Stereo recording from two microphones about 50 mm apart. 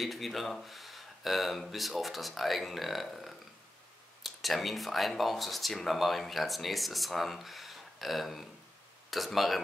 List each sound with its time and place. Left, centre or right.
0.0 s speech: centre